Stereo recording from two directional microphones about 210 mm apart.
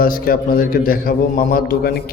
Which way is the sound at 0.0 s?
45° left (ahead or behind).